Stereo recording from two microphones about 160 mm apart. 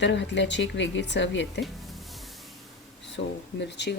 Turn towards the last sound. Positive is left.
turn(degrees=90)